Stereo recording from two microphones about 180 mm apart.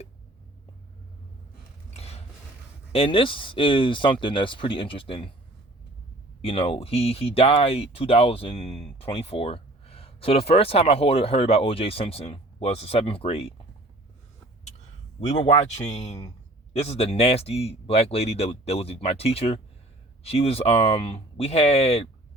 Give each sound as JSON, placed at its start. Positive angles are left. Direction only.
{"t": 1.9, "sound": "a sound", "side_deg": 35}
{"t": 2.9, "sound": "speech", "side_deg": 30}
{"t": 6.4, "sound": "speech", "side_deg": 30}
{"t": 15.3, "sound": "speech", "side_deg": 40}